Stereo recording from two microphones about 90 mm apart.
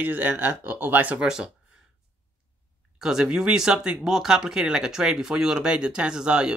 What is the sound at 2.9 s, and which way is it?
Speech, 5° right (ahead or behind).